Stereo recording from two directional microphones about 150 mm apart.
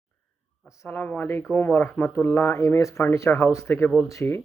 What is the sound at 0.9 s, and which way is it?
Speech, 10° left (ahead or behind).